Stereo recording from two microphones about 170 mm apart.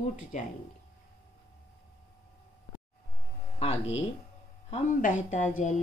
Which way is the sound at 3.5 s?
40° left (ahead or behind).